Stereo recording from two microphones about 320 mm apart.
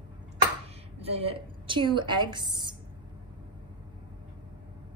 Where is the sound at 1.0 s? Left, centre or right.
Centre.